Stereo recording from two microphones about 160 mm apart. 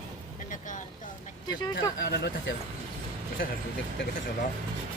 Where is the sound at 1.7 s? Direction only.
90° left.